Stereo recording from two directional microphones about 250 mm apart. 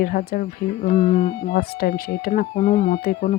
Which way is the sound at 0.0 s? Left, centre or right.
Left.